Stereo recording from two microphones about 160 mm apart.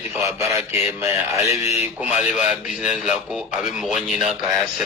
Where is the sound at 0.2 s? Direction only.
20° right (ahead or behind).